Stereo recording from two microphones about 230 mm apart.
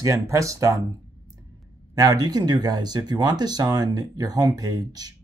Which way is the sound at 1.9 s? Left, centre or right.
Centre.